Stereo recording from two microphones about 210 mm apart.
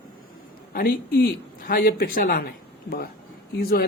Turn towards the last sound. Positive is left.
turn(degrees=45)  # may be behind; listen again after turning